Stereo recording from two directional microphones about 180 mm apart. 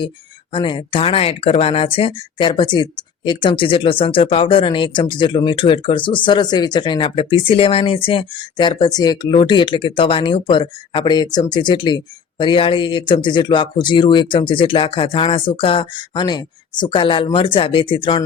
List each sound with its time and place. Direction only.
0.5 s speech: 25° left (ahead or behind)